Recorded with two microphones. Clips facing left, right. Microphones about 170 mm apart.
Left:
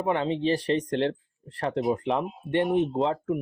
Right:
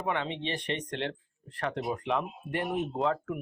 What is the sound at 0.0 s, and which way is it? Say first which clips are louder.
Speech: left 7 dB; 35° left (ahead or behind).